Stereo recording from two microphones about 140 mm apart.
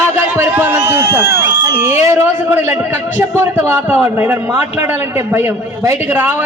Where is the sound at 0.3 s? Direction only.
15° right (ahead or behind).